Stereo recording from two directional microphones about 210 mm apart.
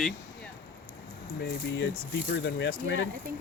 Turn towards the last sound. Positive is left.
turn(degrees=60)  # may be behind; listen again after turning